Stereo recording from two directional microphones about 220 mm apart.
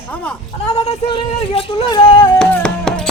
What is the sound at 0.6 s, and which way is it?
Speech, 30° left (ahead or behind).